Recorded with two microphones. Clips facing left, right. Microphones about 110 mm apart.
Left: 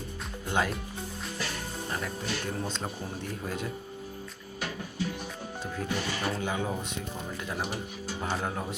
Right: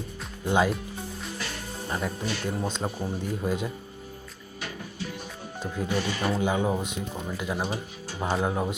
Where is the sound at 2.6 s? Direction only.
15° right (ahead or behind).